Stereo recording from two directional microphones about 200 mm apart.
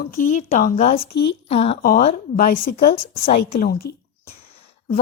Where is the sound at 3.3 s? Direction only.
30° left (ahead or behind).